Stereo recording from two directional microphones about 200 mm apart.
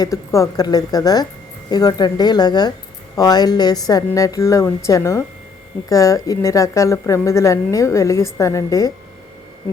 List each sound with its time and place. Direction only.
0.0 s a woman's voice: 15° left (ahead or behind)